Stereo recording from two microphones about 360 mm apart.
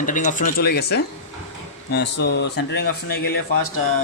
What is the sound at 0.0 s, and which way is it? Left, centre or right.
A man's voice, left.